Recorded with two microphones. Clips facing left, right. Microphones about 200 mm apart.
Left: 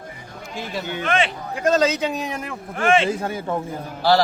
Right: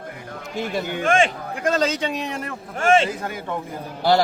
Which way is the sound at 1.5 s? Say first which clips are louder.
Left 3 dB; 5° left (ahead or behind).